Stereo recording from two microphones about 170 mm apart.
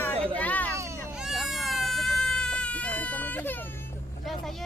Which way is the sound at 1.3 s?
Centre (ahead or behind).